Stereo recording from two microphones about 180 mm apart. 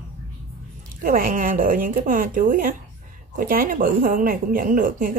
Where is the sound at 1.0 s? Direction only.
50° right (ahead or behind).